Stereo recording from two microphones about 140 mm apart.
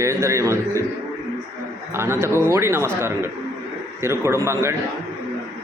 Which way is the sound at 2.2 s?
15° right (ahead or behind).